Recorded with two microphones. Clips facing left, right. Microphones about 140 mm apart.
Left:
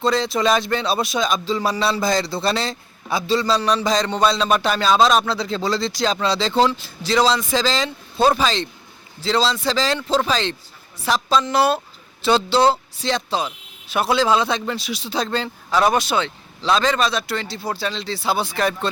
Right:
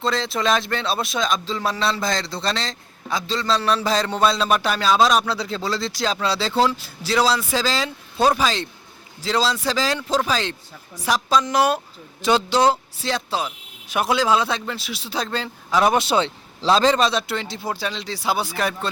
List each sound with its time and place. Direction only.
0.0 s a man's voice: centre (ahead or behind)
15.8 s a man's voice: 20° right (ahead or behind)